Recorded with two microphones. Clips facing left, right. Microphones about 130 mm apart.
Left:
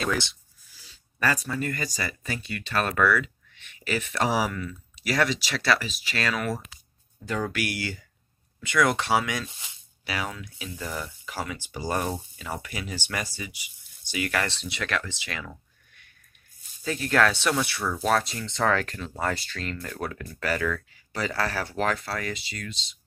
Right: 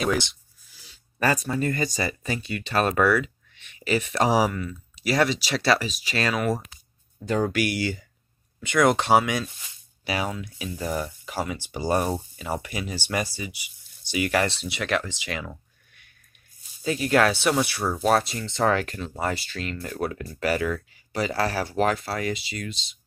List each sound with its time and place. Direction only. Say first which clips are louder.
0.0 s speech: right 3 dB; 15° right (ahead or behind)
7.2 s speech: right 5 dB; 30° right (ahead or behind)
7.5 s speech: right 6 dB; 20° right (ahead or behind)
14.5 s speech: right 3 dB; 10° right (ahead or behind)
14.8 s speech: right 4 dB; 20° right (ahead or behind)
16.8 s speech: right 3 dB; 15° right (ahead or behind)
17.7 s speech: right 3 dB; 35° right (ahead or behind)
18.3 s speech: right 2 dB; 5° right (ahead or behind)